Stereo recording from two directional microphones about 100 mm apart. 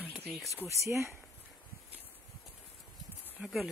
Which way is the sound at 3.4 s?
15° right (ahead or behind).